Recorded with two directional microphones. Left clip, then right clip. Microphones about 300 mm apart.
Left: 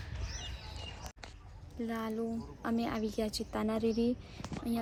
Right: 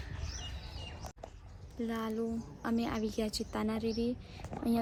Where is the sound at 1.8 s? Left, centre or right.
Centre.